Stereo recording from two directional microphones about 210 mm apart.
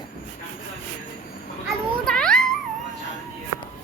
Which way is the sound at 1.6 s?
5° left (ahead or behind).